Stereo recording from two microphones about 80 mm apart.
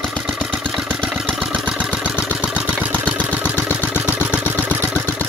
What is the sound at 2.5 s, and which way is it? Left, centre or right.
Vehicle, centre.